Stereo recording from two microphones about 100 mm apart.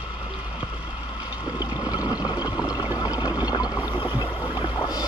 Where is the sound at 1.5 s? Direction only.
45° left (ahead or behind).